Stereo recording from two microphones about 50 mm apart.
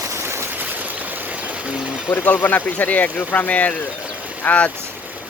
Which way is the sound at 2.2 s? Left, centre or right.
Left.